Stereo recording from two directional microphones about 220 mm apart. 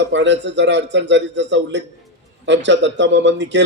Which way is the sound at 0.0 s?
55° right (ahead or behind).